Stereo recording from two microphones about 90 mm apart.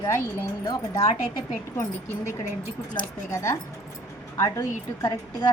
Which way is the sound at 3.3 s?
30° left (ahead or behind).